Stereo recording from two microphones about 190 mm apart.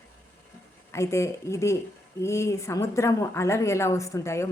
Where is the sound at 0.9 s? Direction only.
15° left (ahead or behind).